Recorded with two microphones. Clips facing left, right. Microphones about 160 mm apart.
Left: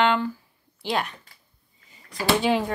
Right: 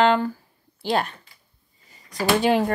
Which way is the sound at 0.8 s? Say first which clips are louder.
Right 3 dB; 35° right (ahead or behind).